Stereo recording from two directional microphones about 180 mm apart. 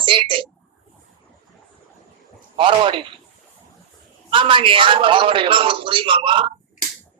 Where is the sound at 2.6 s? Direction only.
30° right (ahead or behind).